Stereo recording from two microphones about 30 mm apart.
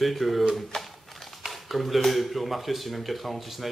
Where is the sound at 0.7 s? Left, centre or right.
Centre.